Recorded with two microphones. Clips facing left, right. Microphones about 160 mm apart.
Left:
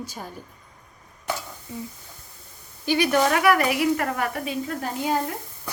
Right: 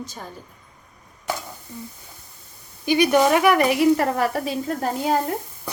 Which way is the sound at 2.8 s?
15° right (ahead or behind).